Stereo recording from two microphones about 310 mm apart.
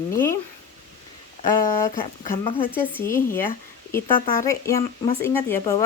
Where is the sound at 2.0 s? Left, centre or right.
Centre.